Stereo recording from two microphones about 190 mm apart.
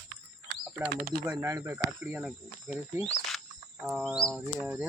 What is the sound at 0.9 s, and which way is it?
Speech, 55° right (ahead or behind).